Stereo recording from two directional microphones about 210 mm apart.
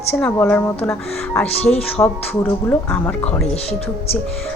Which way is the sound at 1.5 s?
30° left (ahead or behind).